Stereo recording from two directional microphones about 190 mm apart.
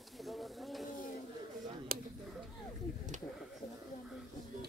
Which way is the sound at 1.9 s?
50° right (ahead or behind).